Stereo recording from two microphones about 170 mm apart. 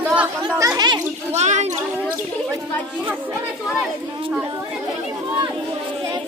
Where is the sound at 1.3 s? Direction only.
40° right (ahead or behind).